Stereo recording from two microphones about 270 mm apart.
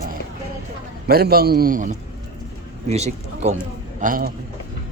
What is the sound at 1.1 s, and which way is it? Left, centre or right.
A man's voice, right.